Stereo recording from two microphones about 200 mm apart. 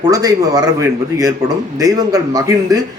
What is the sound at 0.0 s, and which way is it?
Speech, 15° right (ahead or behind).